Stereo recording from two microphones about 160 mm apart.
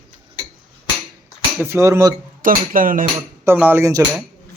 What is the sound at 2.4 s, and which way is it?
Speech, 60° right (ahead or behind).